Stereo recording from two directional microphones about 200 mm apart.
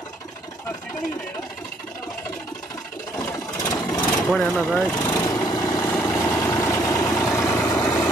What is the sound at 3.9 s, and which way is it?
Vehicle, 5° left (ahead or behind).